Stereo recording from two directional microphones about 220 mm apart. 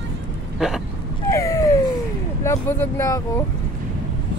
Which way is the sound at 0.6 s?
Centre (ahead or behind).